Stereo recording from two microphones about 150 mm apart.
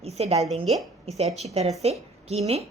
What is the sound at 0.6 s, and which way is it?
Speech, centre (ahead or behind).